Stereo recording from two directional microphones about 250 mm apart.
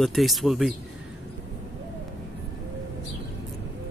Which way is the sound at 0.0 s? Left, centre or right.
Centre.